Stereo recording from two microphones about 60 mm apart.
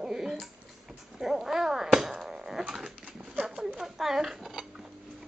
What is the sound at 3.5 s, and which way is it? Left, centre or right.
Dishes, centre.